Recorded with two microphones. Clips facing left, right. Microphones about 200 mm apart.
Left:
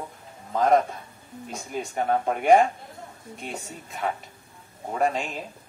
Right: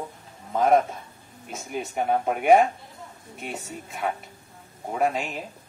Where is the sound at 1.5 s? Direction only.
5° right (ahead or behind).